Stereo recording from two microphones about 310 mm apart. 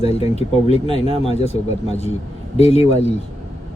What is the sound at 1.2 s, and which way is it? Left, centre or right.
Speech, centre.